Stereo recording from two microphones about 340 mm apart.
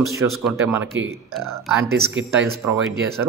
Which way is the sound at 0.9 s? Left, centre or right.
Right.